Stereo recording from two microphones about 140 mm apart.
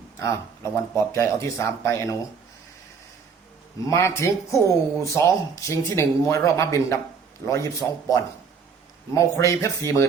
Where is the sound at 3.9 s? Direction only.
20° left (ahead or behind).